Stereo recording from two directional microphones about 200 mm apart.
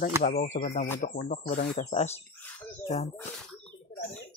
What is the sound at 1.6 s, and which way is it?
Speech, 35° left (ahead or behind).